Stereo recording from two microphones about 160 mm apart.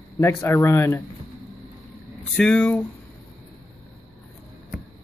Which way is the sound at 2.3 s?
5° left (ahead or behind).